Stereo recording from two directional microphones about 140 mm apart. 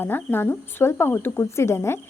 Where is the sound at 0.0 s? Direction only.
15° left (ahead or behind).